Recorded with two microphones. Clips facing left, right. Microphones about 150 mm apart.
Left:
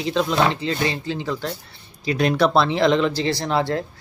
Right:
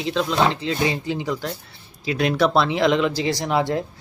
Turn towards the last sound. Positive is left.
turn(degrees=-15)  # may be behind; listen again after turning